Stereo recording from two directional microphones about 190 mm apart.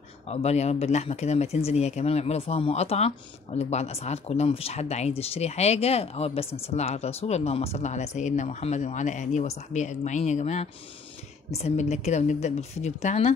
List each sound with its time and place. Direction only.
0.3 s speech: 35° left (ahead or behind)